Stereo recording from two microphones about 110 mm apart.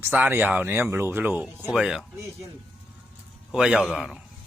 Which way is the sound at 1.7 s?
5° right (ahead or behind).